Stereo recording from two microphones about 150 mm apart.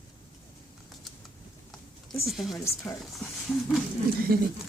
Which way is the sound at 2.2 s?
Centre (ahead or behind).